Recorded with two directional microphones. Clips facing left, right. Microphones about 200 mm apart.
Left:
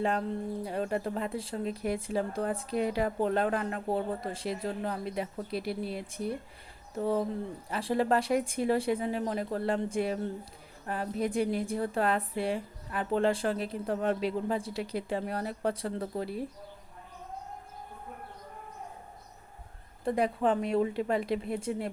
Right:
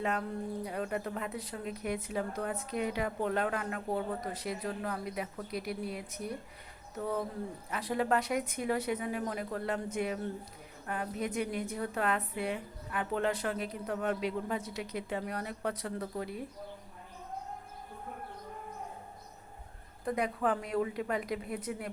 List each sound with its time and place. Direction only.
0.0 s a woman's voice: 30° left (ahead or behind)
20.1 s speech: 30° left (ahead or behind)